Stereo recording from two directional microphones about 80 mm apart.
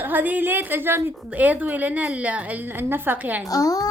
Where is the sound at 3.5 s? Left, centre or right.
Left.